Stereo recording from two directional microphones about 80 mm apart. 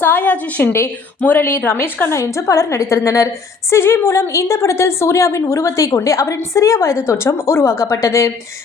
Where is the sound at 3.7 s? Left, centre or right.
Left.